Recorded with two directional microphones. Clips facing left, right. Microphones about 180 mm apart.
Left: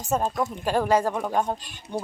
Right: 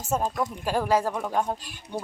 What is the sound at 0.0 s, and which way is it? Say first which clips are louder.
Speech: left 2 dB; 10° right (ahead or behind).